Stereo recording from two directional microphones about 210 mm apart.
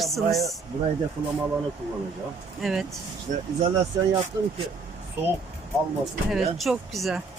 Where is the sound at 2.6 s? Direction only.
Centre (ahead or behind).